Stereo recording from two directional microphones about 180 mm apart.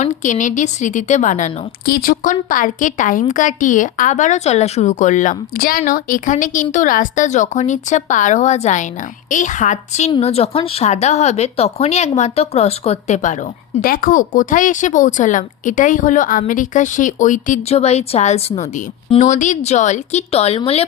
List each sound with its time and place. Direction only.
0.0 s a woman's voice: 45° left (ahead or behind)
13.8 s a woman's voice: 50° left (ahead or behind); by 20.8 s 35° left (ahead or behind)